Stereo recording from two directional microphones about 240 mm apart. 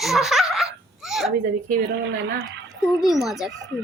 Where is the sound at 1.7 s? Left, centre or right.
Right.